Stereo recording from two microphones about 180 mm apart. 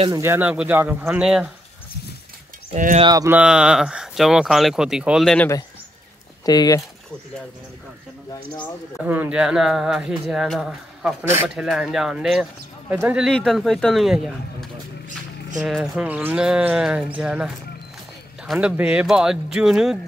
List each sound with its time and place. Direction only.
0.1 s speech: 15° right (ahead or behind)
2.7 s speech: 40° right (ahead or behind)
3.0 s speech: 20° right (ahead or behind)
3.3 s speech: 5° right (ahead or behind)
6.4 s speech: 20° left (ahead or behind)
9.0 s speech: 10° right (ahead or behind)
13.3 s speech: 5° left (ahead or behind)
18.5 s speech: 5° right (ahead or behind)